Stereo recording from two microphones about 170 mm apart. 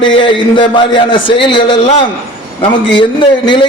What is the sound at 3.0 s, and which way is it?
Speech, 25° left (ahead or behind).